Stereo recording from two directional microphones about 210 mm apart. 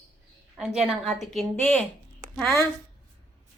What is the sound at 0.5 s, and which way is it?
A woman's voice, 5° right (ahead or behind).